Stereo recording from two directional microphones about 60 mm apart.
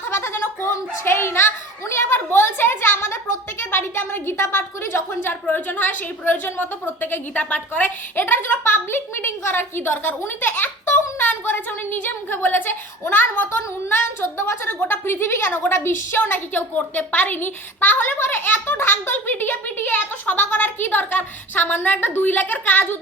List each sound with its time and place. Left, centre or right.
0.1 s a sound: left
0.7 s a child's voice: left
8.1 s a woman's voice: left